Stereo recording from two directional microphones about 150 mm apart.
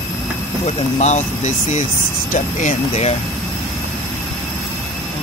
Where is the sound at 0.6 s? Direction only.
50° left (ahead or behind).